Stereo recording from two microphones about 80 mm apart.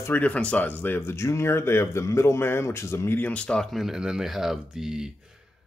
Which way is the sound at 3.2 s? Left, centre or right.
Left.